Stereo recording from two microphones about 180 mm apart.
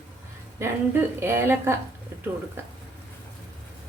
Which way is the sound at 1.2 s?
10° right (ahead or behind).